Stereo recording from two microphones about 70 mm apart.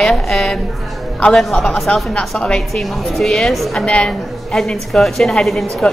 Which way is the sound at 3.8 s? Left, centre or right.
Centre.